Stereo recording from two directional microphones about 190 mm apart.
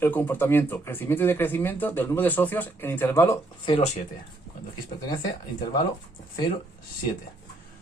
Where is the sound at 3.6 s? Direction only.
30° left (ahead or behind).